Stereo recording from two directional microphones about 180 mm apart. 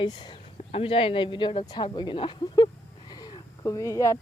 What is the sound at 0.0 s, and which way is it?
Speech, 25° left (ahead or behind).